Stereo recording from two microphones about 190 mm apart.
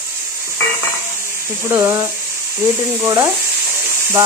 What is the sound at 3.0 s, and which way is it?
Speech, 15° right (ahead or behind).